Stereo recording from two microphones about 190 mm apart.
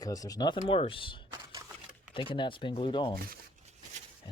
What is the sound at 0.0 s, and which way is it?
Speech, 20° left (ahead or behind).